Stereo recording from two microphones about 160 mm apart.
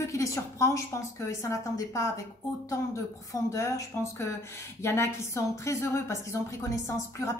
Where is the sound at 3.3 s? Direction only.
20° left (ahead or behind).